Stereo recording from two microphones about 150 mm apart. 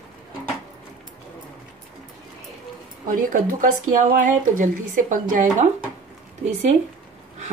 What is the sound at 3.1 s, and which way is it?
Speech, 60° right (ahead or behind).